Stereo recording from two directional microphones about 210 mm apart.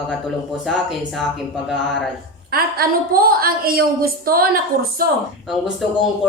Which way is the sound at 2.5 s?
45° right (ahead or behind).